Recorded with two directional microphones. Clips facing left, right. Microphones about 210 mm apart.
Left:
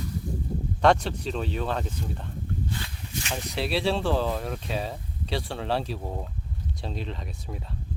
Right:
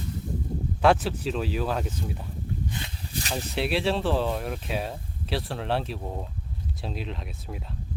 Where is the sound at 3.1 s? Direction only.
35° right (ahead or behind).